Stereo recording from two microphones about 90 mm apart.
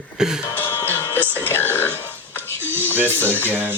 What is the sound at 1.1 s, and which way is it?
Music, 25° left (ahead or behind).